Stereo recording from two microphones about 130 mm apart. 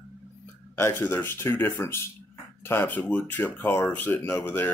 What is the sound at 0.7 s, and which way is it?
Speech, 20° left (ahead or behind).